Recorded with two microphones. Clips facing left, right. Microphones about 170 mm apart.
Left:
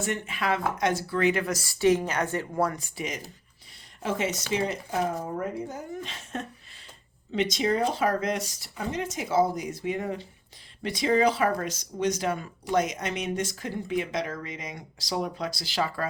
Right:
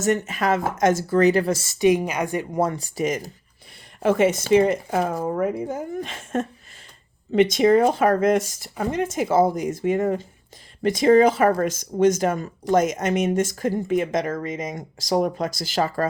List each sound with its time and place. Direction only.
0.0 s speech: 45° right (ahead or behind); by 2.7 s 20° right (ahead or behind)
2.7 s speech: 40° right (ahead or behind)
4.0 s speech: 55° right (ahead or behind)